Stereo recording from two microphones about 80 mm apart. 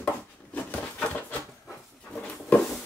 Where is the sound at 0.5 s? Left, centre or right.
Left.